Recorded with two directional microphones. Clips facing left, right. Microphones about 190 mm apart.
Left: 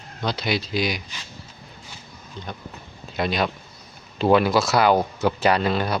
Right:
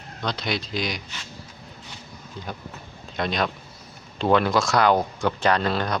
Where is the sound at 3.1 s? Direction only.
5° left (ahead or behind).